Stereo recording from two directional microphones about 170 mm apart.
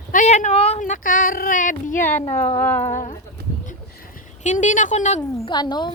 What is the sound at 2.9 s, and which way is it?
Speech, 45° left (ahead or behind).